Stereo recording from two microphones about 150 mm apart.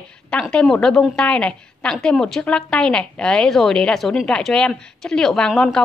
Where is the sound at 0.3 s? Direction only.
5° left (ahead or behind).